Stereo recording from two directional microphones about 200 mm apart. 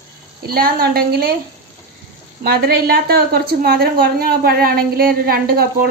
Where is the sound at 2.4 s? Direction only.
50° right (ahead or behind).